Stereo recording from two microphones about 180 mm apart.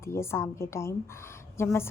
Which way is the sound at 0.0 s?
15° left (ahead or behind).